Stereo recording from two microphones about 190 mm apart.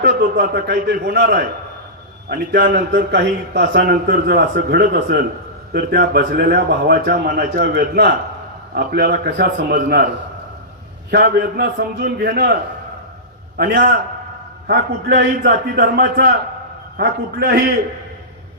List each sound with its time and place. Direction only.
0.0 s a man's voice: 60° right (ahead or behind)
2.3 s speech: 50° right (ahead or behind)
3.1 s a man's voice: 70° right (ahead or behind)
11.1 s speech: 55° right (ahead or behind)
13.6 s speech: 45° right (ahead or behind)
14.7 s a man's voice: 60° right (ahead or behind)